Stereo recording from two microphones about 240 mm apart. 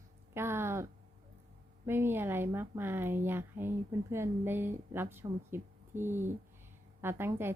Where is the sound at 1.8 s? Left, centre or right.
Centre.